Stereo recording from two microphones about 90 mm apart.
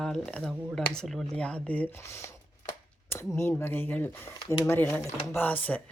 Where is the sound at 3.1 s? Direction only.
25° left (ahead or behind).